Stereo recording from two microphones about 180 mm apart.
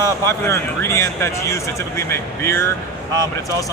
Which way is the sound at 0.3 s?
15° left (ahead or behind).